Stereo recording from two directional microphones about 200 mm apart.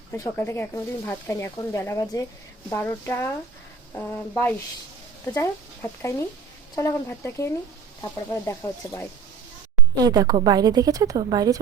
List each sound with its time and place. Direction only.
0.2 s speech: 10° left (ahead or behind)
9.9 s a woman's voice: 20° right (ahead or behind)